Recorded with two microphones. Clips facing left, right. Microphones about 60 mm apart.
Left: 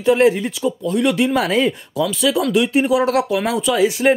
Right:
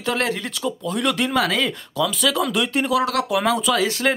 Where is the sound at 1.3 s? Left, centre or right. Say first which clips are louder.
Left 4 dB; left.